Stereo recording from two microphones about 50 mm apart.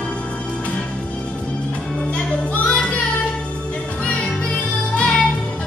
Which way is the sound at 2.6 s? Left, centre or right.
Left.